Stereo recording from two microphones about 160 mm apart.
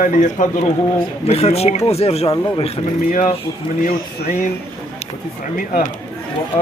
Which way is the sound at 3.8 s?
65° left (ahead or behind).